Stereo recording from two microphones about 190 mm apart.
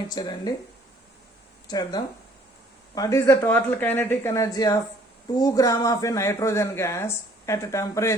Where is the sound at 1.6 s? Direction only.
20° left (ahead or behind).